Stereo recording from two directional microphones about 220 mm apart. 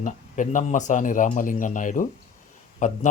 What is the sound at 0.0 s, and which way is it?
Speech, 35° left (ahead or behind).